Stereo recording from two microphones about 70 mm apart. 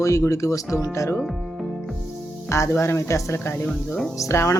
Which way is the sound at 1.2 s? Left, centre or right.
Centre.